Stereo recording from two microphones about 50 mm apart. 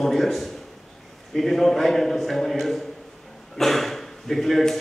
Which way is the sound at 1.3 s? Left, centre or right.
Centre.